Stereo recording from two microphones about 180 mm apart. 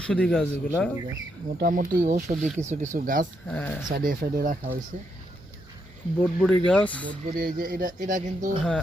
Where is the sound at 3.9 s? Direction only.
50° right (ahead or behind).